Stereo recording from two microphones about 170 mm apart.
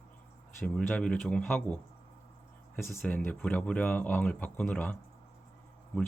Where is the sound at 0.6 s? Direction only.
5° left (ahead or behind).